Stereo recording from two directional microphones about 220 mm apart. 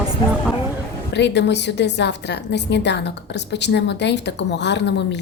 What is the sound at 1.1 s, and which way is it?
A woman's voice, 50° left (ahead or behind).